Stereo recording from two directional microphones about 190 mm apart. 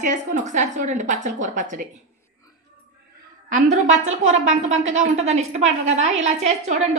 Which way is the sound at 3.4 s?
40° right (ahead or behind).